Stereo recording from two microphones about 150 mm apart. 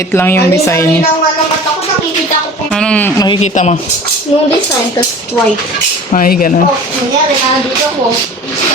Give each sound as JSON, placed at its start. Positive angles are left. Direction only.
{"t": 0.1, "sound": "a woman's voice", "side_deg": 15}
{"t": 2.7, "sound": "a woman's voice", "side_deg": 5}
{"t": 3.4, "sound": "speech", "side_deg": 50}
{"t": 6.1, "sound": "speech", "side_deg": 65}